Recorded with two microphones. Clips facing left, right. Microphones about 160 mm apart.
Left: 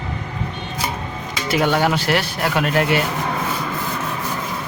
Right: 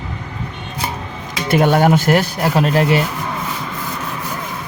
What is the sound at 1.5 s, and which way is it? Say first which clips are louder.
Speech: right 5 dB; 50° right (ahead or behind).